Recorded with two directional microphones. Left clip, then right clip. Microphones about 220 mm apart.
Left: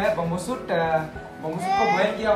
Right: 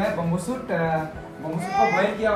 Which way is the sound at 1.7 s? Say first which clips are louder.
Even; 30° left (ahead or behind).